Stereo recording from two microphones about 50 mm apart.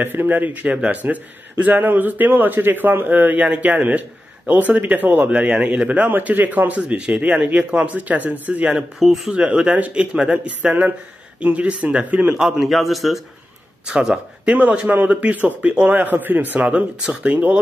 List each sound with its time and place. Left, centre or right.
0.0 s a man's voice: right
3.4 s speech: right
6.0 s a man's voice: right
9.0 s a man's voice: centre
9.3 s speech: right
12.4 s a man's voice: centre
13.8 s speech: centre
14.4 s a man's voice: right
16.5 s speech: right
17.3 s a man's voice: right